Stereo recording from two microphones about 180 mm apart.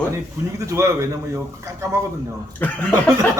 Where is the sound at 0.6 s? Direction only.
15° right (ahead or behind).